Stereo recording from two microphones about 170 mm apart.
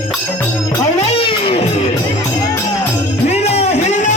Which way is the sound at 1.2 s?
30° left (ahead or behind).